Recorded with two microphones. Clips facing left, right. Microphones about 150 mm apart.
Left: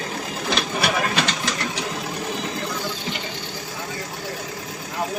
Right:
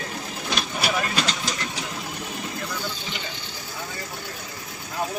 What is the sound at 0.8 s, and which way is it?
Vehicle, 65° left (ahead or behind).